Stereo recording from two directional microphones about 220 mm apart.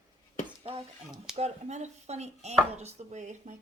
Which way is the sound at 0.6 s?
25° right (ahead or behind).